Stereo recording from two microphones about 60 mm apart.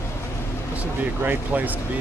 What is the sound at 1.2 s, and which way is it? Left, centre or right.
Speech, right.